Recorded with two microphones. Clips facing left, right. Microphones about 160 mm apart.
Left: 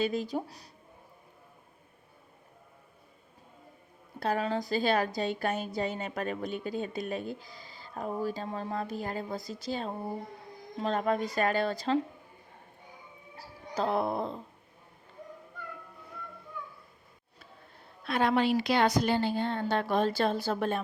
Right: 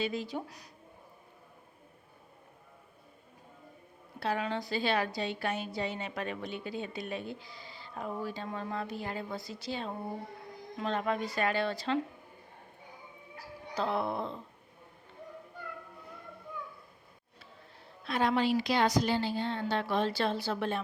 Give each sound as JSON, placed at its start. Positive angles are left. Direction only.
{"t": 0.0, "sound": "a woman's voice", "side_deg": 45}
{"t": 0.4, "sound": "speech", "side_deg": 30}
{"t": 4.2, "sound": "a woman's voice", "side_deg": 40}
{"t": 13.7, "sound": "speech", "side_deg": 40}
{"t": 18.0, "sound": "a woman's voice", "side_deg": 60}